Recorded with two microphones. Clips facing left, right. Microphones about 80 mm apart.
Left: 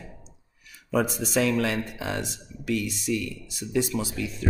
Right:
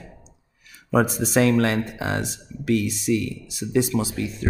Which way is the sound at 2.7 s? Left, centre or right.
Right.